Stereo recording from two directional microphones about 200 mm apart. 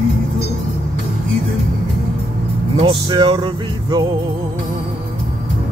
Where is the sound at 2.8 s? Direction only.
25° right (ahead or behind).